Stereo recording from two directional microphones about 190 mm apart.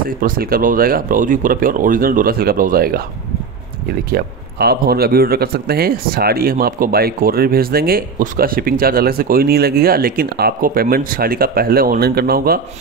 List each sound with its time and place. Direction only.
0.0 s speech: 50° right (ahead or behind)
4.1 s speech: 55° right (ahead or behind)